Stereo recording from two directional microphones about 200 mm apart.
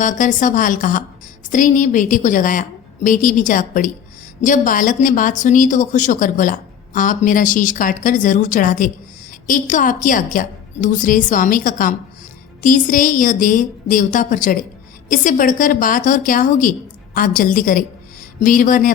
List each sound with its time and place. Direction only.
0.0 s a woman's voice: 40° left (ahead or behind)